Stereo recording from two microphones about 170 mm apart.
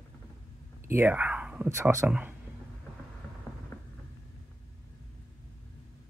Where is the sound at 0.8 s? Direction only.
15° right (ahead or behind).